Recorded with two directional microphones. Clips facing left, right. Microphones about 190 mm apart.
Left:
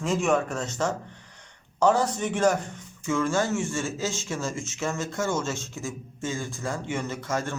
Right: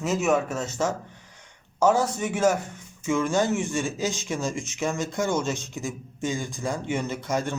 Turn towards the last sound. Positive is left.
turn(degrees=-15)  # may be behind; listen again after turning